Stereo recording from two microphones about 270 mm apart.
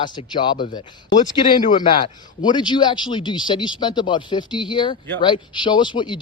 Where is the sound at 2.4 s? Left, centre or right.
Centre.